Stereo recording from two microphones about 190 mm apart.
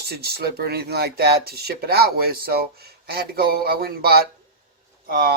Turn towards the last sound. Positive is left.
turn(degrees=-55)  # may be behind; listen again after turning